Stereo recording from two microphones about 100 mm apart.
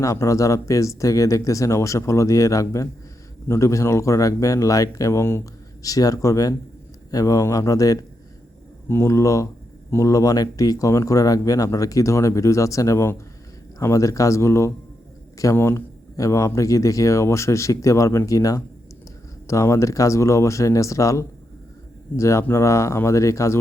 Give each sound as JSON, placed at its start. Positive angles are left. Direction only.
{"t": 0.0, "sound": "speech", "side_deg": 30}